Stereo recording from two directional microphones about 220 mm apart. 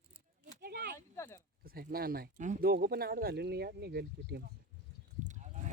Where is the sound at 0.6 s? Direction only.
40° right (ahead or behind).